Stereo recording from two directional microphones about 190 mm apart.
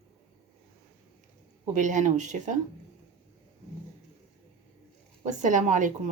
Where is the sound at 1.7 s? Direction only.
40° right (ahead or behind).